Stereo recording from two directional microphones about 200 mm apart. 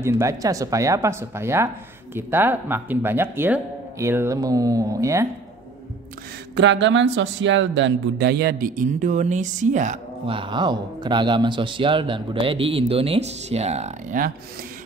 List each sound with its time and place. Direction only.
0.0 s speech: 15° right (ahead or behind)
6.5 s a man's voice: 65° right (ahead or behind); by 9.9 s 40° right (ahead or behind)
10.2 s speech: 25° right (ahead or behind)